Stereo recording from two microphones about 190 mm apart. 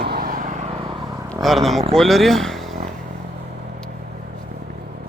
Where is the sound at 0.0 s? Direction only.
55° right (ahead or behind).